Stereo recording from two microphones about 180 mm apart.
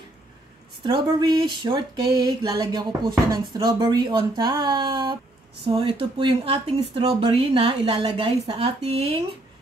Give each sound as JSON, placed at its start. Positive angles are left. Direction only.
{"t": 0.8, "sound": "speech", "side_deg": -25}